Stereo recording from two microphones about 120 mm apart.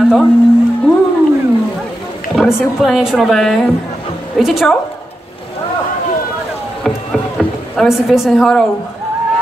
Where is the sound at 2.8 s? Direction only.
5° right (ahead or behind).